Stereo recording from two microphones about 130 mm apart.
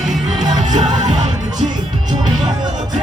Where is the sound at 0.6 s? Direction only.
65° right (ahead or behind).